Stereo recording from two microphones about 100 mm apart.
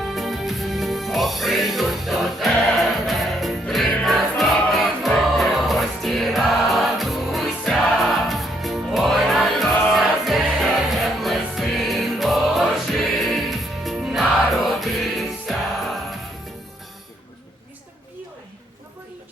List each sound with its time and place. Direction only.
0.0 s music: centre (ahead or behind)